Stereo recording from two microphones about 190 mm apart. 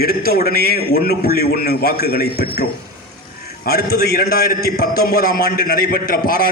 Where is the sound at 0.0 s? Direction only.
55° left (ahead or behind).